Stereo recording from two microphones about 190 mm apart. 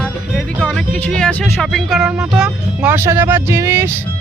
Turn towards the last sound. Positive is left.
turn(degrees=-15)  # may be behind; listen again after turning